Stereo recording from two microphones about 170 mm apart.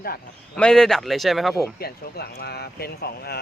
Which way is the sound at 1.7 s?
65° left (ahead or behind).